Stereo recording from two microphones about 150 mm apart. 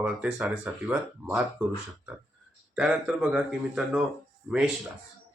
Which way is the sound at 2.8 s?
5° right (ahead or behind).